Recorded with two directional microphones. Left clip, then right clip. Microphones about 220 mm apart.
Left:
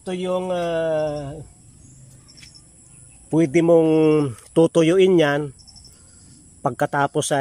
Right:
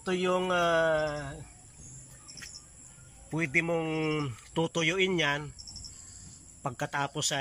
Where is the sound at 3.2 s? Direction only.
50° left (ahead or behind).